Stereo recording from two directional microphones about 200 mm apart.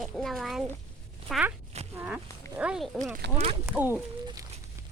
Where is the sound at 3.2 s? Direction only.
60° right (ahead or behind).